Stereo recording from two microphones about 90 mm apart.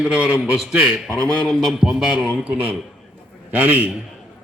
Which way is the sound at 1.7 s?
5° right (ahead or behind).